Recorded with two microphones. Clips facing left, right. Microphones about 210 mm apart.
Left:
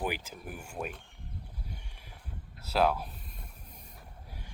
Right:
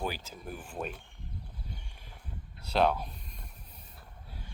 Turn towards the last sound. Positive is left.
turn(degrees=5)  # may be behind; listen again after turning